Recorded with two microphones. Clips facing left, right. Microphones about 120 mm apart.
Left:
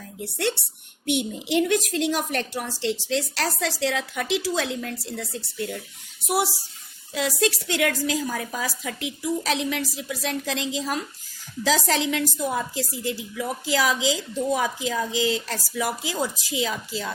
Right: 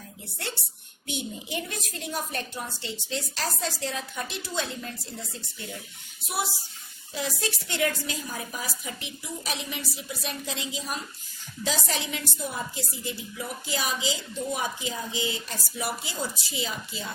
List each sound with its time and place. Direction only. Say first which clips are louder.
0.3 s a child's voice: left 11 dB; 65° left (ahead or behind); by 17.1 s 85° left